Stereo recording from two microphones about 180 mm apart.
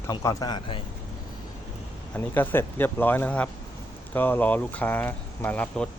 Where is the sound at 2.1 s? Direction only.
10° left (ahead or behind).